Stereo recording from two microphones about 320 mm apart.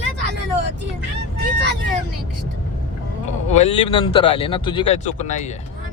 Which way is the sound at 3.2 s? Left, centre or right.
Left.